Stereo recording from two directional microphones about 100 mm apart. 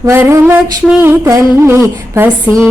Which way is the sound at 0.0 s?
25° right (ahead or behind).